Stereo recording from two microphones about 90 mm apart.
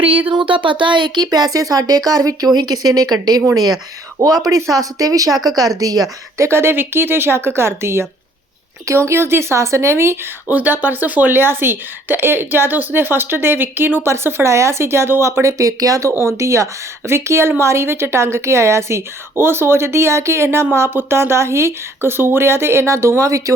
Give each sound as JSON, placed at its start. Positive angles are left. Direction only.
{"t": 0.3, "sound": "speech", "side_deg": -70}